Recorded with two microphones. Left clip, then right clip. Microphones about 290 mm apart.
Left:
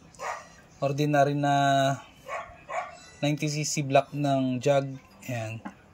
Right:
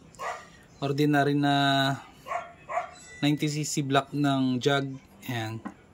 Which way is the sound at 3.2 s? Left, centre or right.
Centre.